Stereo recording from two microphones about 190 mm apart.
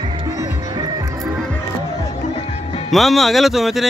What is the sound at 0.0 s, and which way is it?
Music, 20° right (ahead or behind).